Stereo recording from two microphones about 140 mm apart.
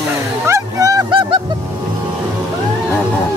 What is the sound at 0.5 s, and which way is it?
Vehicle, 25° right (ahead or behind).